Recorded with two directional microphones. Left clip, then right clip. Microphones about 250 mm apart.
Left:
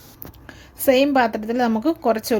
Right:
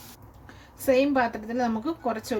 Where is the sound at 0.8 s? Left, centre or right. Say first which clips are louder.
Left 6 dB; left.